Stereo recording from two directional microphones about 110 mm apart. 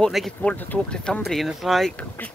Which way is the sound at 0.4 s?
15° left (ahead or behind).